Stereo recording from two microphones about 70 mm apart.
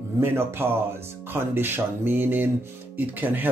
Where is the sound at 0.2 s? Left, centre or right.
Right.